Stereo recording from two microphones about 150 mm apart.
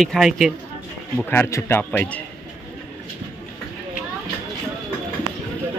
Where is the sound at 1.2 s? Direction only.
15° left (ahead or behind).